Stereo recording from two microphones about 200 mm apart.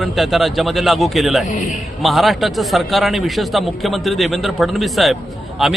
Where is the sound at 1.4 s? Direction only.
40° left (ahead or behind).